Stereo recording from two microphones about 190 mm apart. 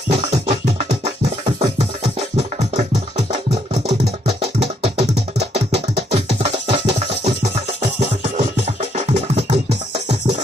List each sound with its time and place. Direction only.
0.1 s music: 35° right (ahead or behind)